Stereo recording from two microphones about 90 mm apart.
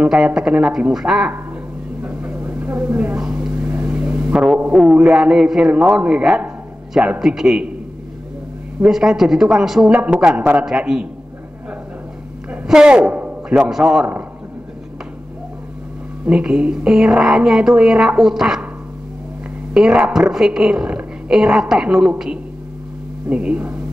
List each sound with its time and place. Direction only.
0.0 s speech: 5° right (ahead or behind)
2.0 s vehicle: 15° right (ahead or behind)
3.2 s a sound: 10° right (ahead or behind)
4.7 s a man's voice: 5° right (ahead or behind)
8.8 s speech: 5° right (ahead or behind)
12.6 s a man's voice: 10° right (ahead or behind)
16.3 s a woman's voice: 10° right (ahead or behind)
19.7 s a woman's voice: 5° right (ahead or behind)
23.3 s speech: 15° right (ahead or behind)